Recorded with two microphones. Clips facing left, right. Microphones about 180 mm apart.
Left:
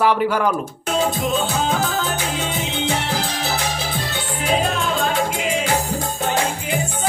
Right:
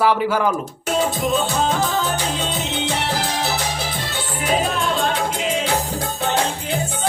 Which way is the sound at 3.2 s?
60° right (ahead or behind).